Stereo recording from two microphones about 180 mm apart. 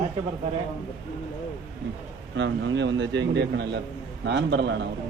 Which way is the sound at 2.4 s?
85° right.